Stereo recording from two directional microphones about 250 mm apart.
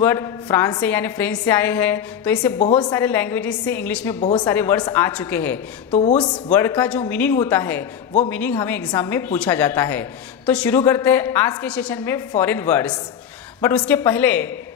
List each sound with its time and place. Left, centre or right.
0.0 s a woman's voice: centre
4.2 s a woman's voice: left
4.5 s a woman's voice: centre
5.9 s a woman's voice: left
6.5 s a woman's voice: centre